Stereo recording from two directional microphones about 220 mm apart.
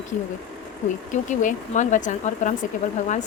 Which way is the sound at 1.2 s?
35° left (ahead or behind).